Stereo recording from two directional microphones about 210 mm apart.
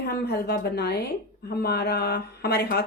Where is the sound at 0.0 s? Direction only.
50° left (ahead or behind).